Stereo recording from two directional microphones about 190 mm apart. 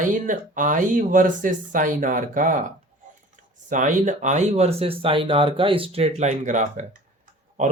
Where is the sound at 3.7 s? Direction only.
45° right (ahead or behind).